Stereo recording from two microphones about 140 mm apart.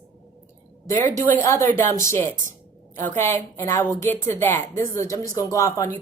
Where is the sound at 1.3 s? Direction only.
20° left (ahead or behind).